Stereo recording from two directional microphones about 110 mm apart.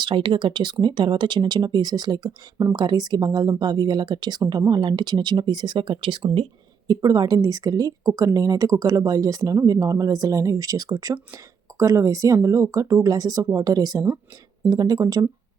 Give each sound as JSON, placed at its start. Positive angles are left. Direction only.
{"t": 0.0, "sound": "speech", "side_deg": -45}
{"t": 6.8, "sound": "speech", "side_deg": -35}